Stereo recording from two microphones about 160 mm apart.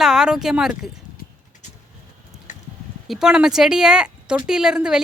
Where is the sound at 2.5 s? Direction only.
50° left (ahead or behind).